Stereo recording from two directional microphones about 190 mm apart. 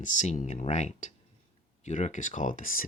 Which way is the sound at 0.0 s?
40° left (ahead or behind).